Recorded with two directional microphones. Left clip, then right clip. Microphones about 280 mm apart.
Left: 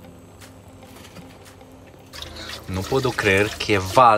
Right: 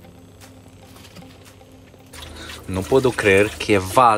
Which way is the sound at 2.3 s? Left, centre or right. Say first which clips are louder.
Right 3 dB; centre.